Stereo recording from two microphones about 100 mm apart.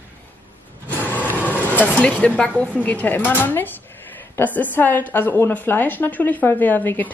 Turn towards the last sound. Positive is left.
turn(degrees=20)  # may be behind; listen again after turning